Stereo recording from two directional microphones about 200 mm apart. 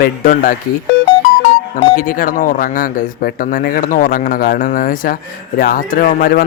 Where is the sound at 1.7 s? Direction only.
45° left (ahead or behind).